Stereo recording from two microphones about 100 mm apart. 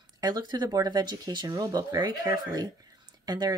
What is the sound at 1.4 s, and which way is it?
Speech, 35° right (ahead or behind).